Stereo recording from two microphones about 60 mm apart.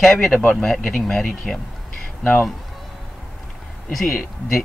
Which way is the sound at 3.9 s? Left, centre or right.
Centre.